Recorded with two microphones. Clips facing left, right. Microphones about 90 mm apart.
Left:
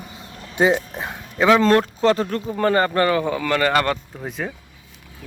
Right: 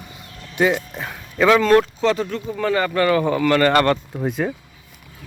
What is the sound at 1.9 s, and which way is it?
Speech, 40° left (ahead or behind).